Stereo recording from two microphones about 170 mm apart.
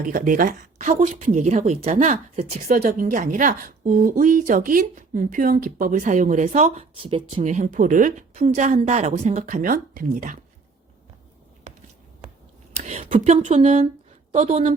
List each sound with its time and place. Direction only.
0.0 s speech: 55° right (ahead or behind)
7.0 s speech: 35° right (ahead or behind); by 10.3 s 50° right (ahead or behind)
12.8 s a woman's voice: 45° right (ahead or behind)